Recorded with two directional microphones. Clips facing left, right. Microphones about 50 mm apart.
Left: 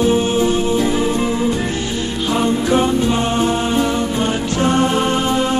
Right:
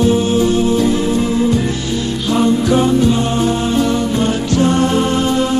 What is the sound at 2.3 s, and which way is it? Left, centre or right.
Music, centre.